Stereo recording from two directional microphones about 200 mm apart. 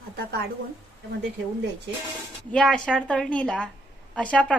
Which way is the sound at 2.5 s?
5° left (ahead or behind).